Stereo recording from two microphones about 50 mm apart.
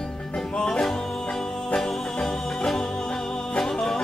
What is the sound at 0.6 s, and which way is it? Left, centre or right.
Music, centre.